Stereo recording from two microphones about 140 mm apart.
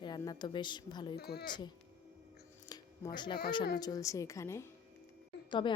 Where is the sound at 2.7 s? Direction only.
30° left (ahead or behind).